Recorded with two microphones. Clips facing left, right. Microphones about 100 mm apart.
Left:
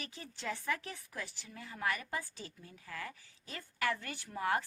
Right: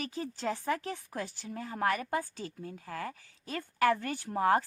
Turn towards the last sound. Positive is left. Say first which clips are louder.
# right 7 dB
turn(degrees=-40)  # may be behind; listen again after turning